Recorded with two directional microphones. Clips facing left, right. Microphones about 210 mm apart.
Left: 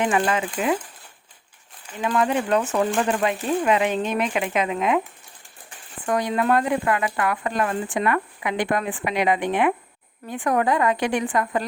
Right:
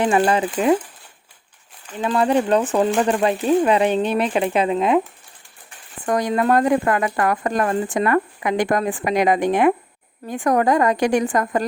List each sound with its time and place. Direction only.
0.0 s speech: 35° right (ahead or behind)
2.0 s speech: 30° right (ahead or behind)
6.1 s speech: 40° right (ahead or behind)